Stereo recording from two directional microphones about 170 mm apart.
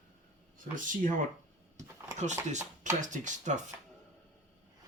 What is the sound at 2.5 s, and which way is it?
Speech, 45° right (ahead or behind).